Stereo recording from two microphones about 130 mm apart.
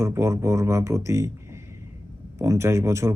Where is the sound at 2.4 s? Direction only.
20° right (ahead or behind).